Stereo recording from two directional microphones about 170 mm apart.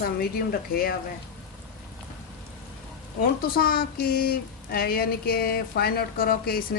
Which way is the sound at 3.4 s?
60° left (ahead or behind).